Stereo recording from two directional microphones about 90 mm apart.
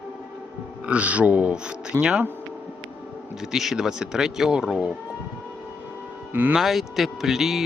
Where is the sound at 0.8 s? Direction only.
15° right (ahead or behind).